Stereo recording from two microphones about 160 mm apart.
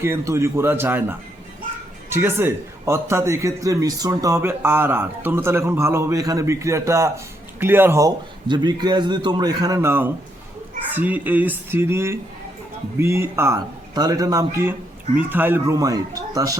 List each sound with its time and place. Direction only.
0.0 s a man's voice: 15° right (ahead or behind)